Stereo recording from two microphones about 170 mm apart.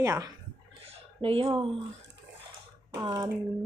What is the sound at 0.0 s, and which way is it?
Speech, 20° right (ahead or behind).